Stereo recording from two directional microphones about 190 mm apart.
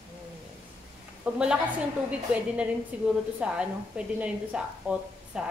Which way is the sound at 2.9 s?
5° right (ahead or behind).